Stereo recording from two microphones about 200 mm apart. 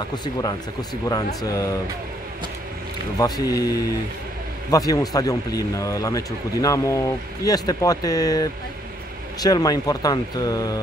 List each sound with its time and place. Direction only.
0.1 s speech: 20° left (ahead or behind)
3.2 s speech: 20° left (ahead or behind)